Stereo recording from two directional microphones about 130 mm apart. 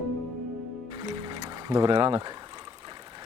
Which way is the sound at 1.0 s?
35° right (ahead or behind).